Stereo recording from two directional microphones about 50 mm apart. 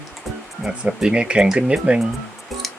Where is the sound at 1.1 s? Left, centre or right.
Right.